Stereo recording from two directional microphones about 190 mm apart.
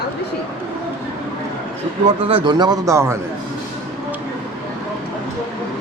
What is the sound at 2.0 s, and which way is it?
A man's voice, 25° right (ahead or behind).